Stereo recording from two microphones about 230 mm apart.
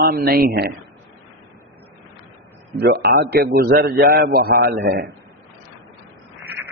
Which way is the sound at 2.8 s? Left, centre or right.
Right.